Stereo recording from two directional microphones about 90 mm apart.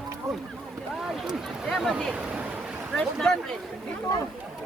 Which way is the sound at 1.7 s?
Centre (ahead or behind).